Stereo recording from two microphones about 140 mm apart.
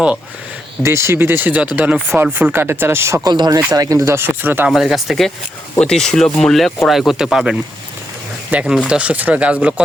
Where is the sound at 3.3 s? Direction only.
30° right (ahead or behind); by 4.7 s 15° right (ahead or behind).